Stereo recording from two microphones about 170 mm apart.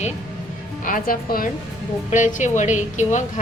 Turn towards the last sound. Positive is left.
turn(degrees=45)  # may be behind; listen again after turning